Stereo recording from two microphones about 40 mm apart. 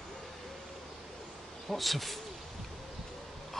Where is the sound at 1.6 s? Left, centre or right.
Centre.